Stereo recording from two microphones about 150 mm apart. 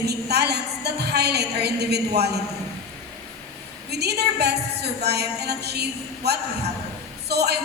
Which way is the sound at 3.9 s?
90° right.